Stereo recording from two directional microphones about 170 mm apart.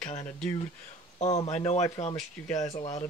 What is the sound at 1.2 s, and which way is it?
Speech, 40° left (ahead or behind).